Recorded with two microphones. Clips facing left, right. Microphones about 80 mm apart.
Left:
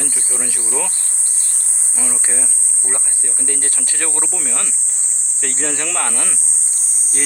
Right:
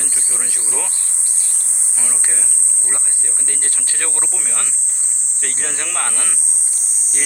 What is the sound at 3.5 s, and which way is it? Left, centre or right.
Speech, right.